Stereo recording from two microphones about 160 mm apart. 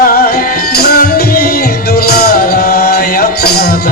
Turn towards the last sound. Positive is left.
turn(degrees=75)  # may be behind; listen again after turning